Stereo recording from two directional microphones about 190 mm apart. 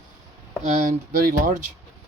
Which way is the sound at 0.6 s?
45° right (ahead or behind).